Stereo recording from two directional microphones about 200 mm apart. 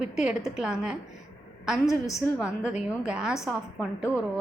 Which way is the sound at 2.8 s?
5° right (ahead or behind).